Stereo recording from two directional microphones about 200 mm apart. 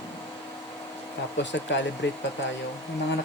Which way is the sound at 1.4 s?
65° left (ahead or behind).